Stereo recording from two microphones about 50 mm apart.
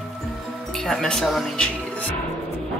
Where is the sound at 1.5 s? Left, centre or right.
Left.